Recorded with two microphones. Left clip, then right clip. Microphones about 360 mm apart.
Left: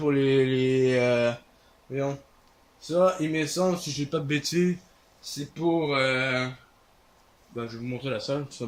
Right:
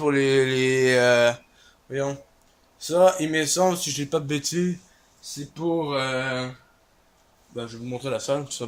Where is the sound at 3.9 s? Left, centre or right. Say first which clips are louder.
Right 3 dB; centre.